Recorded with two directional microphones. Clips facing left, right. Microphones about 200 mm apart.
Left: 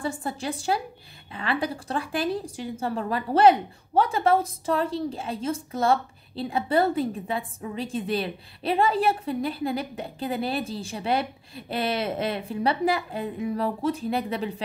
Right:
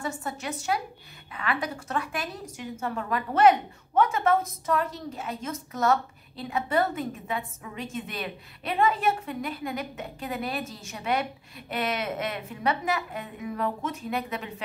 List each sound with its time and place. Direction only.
0.0 s a woman's voice: 30° left (ahead or behind)